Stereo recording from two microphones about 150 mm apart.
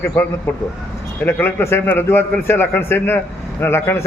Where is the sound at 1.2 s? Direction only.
15° left (ahead or behind).